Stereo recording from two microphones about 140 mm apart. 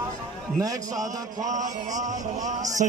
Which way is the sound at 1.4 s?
60° right (ahead or behind).